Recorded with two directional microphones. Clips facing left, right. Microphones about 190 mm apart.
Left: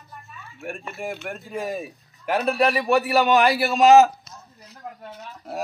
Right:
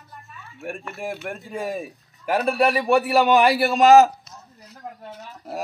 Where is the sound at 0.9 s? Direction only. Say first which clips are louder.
Even; centre (ahead or behind).